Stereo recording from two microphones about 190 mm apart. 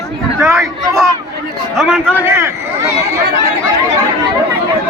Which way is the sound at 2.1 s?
10° right (ahead or behind).